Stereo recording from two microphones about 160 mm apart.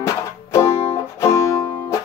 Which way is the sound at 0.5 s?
20° left (ahead or behind).